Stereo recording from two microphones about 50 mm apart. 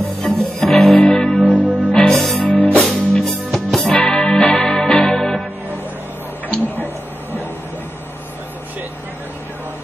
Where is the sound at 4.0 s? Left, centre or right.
Centre.